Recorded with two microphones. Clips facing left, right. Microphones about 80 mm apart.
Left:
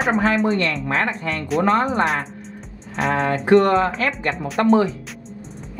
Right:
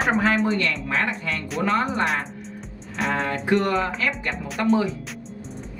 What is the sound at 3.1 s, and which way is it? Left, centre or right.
Speech, left.